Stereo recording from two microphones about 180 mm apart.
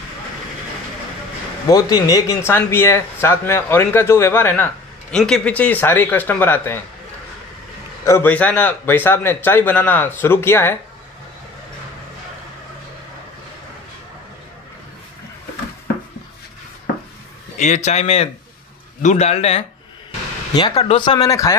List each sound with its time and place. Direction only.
1.7 s speech: 20° left (ahead or behind)
8.0 s speech: 15° left (ahead or behind)
17.6 s speech: 40° left (ahead or behind)
20.5 s speech: 25° left (ahead or behind)